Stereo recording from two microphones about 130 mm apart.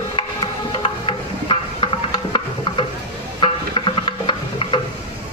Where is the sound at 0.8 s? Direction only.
40° left (ahead or behind).